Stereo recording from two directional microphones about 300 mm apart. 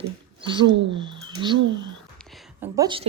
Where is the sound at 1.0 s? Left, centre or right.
Centre.